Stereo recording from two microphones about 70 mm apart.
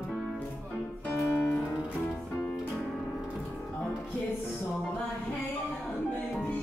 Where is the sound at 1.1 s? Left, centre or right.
Left.